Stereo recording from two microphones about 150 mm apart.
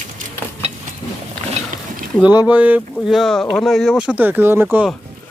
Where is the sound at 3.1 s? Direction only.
5° left (ahead or behind).